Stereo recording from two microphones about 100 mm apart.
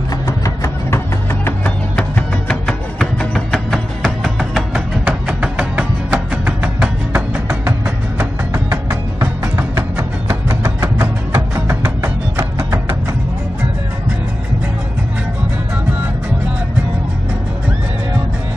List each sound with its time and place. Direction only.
0.4 s music: 25° left (ahead or behind); by 12.9 s 25° right (ahead or behind)